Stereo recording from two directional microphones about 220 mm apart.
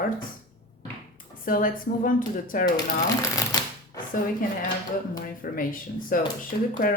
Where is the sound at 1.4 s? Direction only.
40° left (ahead or behind).